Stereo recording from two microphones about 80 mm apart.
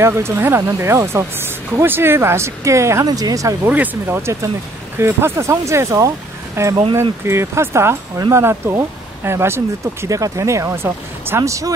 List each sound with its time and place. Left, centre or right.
0.0 s speech: right
3.1 s speech: right
3.6 s speech: right
10.0 s speech: right